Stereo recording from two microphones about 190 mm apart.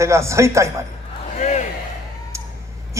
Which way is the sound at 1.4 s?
40° left (ahead or behind).